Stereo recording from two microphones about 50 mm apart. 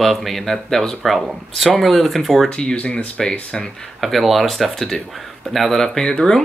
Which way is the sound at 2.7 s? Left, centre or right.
Left.